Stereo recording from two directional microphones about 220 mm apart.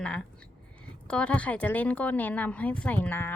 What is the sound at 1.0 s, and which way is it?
Speech, 5° left (ahead or behind).